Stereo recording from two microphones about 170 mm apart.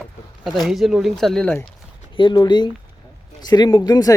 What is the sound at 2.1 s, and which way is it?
Speech, 25° left (ahead or behind).